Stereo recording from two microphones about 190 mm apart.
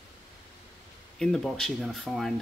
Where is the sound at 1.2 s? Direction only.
Centre (ahead or behind).